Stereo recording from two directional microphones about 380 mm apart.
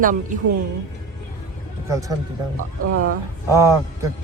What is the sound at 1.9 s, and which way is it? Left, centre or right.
Speech, centre.